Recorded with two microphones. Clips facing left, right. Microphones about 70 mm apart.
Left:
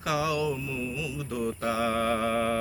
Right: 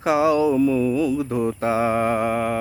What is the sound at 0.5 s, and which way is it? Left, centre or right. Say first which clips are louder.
Mantra: right 15 dB; right.